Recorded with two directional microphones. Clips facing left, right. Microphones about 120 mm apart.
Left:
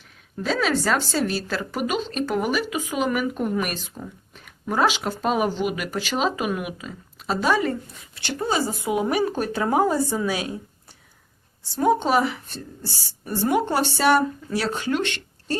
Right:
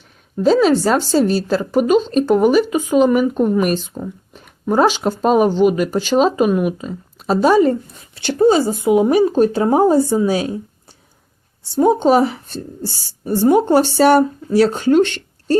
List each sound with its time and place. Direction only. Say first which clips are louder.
0.4 s speech: right 10 dB; 30° right (ahead or behind)
11.7 s speech: right 7 dB; 25° right (ahead or behind)